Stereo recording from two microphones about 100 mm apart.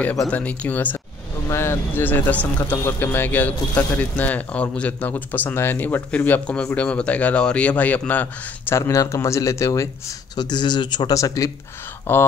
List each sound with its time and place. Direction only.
0.3 s speech: 15° left (ahead or behind)
8.7 s speech: 30° left (ahead or behind)
10.3 s speech: 45° left (ahead or behind)
11.1 s speech: 35° left (ahead or behind)
12.1 s speech: 20° left (ahead or behind)